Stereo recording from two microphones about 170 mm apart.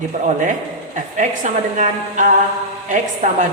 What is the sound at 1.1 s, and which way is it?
A man's voice, 45° right (ahead or behind).